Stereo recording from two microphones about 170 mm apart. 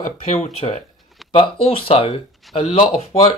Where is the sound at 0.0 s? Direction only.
40° left (ahead or behind).